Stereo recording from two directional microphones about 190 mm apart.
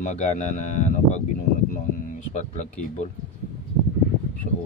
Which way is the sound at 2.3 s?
35° left (ahead or behind).